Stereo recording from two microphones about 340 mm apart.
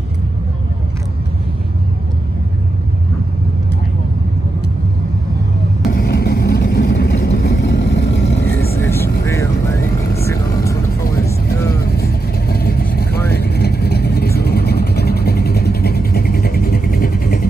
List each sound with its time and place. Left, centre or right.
5.9 s vehicle: left
8.7 s vehicle: centre
11.8 s vehicle: left